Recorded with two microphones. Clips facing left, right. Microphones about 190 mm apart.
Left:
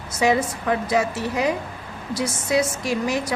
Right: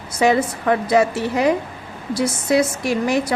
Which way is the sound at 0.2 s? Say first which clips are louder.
Right 3 dB; 60° right (ahead or behind).